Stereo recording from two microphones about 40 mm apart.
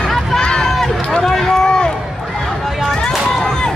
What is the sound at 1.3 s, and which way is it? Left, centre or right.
Run, centre.